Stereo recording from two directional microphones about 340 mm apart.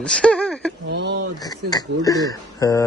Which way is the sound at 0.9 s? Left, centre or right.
Right.